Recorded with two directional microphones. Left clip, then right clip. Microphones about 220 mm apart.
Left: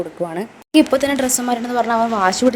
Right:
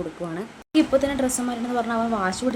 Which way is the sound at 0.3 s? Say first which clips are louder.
Left 7 dB; 30° left (ahead or behind).